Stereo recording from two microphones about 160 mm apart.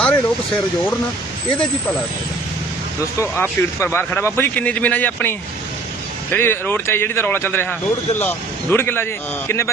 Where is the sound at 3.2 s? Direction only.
15° left (ahead or behind).